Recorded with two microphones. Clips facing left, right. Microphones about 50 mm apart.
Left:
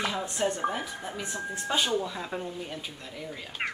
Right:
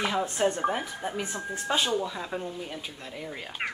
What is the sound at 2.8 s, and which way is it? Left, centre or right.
Speech, centre.